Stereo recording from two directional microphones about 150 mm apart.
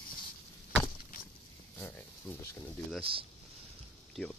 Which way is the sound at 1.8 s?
15° left (ahead or behind).